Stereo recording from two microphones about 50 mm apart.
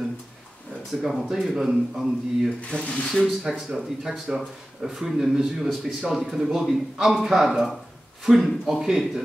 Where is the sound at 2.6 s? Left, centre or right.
Left.